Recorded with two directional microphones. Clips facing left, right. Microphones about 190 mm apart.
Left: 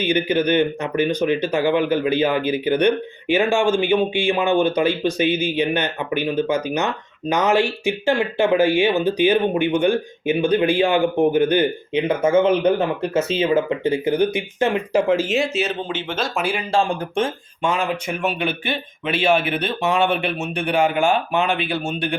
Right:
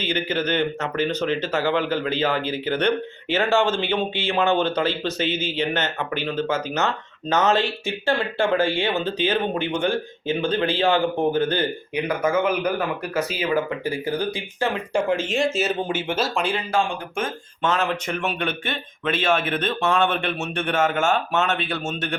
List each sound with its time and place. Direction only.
0.0 s speech: 15° left (ahead or behind)
14.9 s speech: centre (ahead or behind)
15.9 s speech: 10° right (ahead or behind)
16.3 s speech: 5° left (ahead or behind)
16.7 s speech: 30° left (ahead or behind)
17.6 s speech: 10° left (ahead or behind)